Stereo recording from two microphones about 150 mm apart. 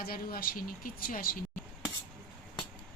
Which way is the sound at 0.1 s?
80° left.